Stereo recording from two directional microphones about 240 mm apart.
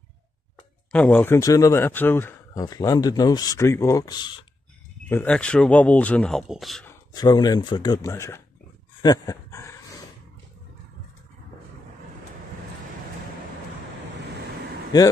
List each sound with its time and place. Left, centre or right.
0.9 s speech: centre
5.0 s speech: centre
7.2 s speech: centre
9.0 s a sound: centre